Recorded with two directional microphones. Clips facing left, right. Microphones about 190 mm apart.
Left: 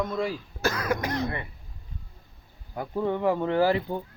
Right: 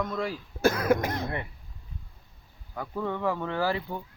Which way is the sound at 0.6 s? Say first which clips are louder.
Right 4 dB; 55° right (ahead or behind).